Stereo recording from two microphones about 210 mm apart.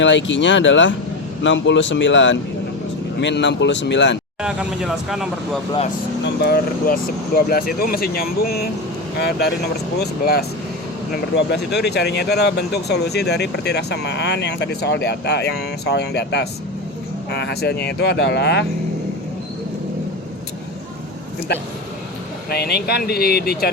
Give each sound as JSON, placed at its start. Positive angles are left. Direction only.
{"t": 0.0, "sound": "speech", "side_deg": 60}
{"t": 4.4, "sound": "speech", "side_deg": -5}
{"t": 6.2, "sound": "speech", "side_deg": 50}
{"t": 10.0, "sound": "speech", "side_deg": 50}
{"t": 22.4, "sound": "speech", "side_deg": 50}